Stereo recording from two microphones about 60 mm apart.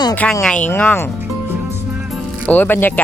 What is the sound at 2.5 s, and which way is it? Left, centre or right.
Speech, left.